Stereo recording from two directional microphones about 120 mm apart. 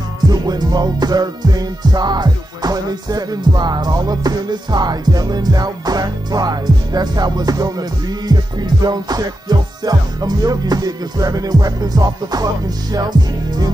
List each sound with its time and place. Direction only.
0.3 s music: 35° right (ahead or behind)